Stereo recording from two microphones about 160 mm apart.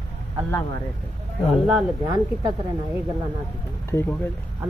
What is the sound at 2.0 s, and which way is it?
Speech, 30° right (ahead or behind).